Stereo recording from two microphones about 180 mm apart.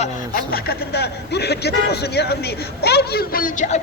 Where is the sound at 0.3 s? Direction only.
60° left (ahead or behind).